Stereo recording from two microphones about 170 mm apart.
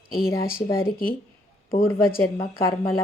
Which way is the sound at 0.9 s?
60° left (ahead or behind).